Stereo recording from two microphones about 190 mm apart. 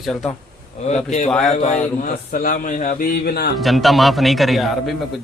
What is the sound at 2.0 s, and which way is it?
A man's voice, 50° left (ahead or behind).